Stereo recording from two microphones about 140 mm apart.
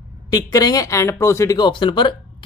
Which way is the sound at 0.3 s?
30° left (ahead or behind).